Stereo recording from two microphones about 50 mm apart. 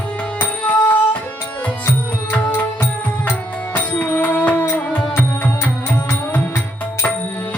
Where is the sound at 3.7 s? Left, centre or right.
Left.